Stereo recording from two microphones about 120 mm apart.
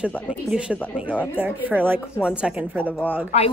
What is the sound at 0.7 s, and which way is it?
Speech, 15° left (ahead or behind).